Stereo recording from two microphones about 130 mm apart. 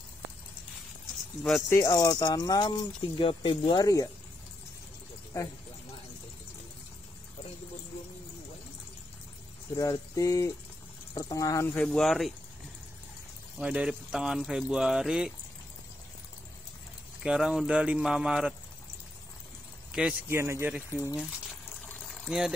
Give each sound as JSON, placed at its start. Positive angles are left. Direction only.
{"t": 1.7, "sound": "speech", "side_deg": 25}
{"t": 9.8, "sound": "speech", "side_deg": 25}
{"t": 11.7, "sound": "speech", "side_deg": 5}
{"t": 13.6, "sound": "speech", "side_deg": -10}
{"t": 17.2, "sound": "speech", "side_deg": -5}
{"t": 19.9, "sound": "speech", "side_deg": -5}
{"t": 20.2, "sound": "speech", "side_deg": -20}
{"t": 20.9, "sound": "speech", "side_deg": 20}
{"t": 22.0, "sound": "pour", "side_deg": 0}